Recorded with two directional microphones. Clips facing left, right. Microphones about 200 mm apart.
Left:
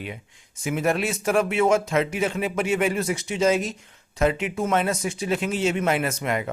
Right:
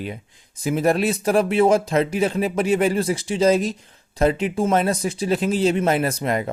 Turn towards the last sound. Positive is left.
turn(degrees=-35)  # may be behind; listen again after turning